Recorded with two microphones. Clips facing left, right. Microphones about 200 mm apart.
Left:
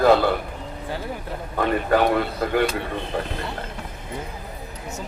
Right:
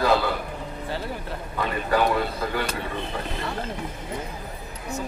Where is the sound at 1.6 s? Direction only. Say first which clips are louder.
Left 4 dB; 55° left (ahead or behind).